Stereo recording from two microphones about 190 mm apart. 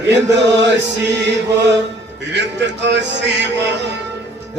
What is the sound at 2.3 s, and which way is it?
Speech, 65° right (ahead or behind).